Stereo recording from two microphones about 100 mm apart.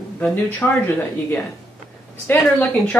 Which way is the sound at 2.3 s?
20° left (ahead or behind).